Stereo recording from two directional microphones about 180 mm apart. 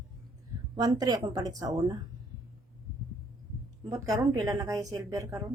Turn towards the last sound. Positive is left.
turn(degrees=-20)  # may be behind; listen again after turning